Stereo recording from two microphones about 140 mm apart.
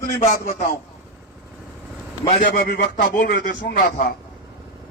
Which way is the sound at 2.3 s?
75° left (ahead or behind).